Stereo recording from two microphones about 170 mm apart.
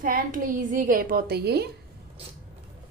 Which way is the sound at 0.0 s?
50° right (ahead or behind).